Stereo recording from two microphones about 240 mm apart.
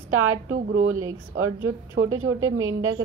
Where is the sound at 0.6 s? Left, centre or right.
Right.